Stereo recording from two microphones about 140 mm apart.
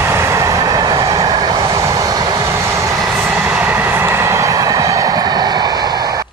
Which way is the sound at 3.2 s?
5° right (ahead or behind).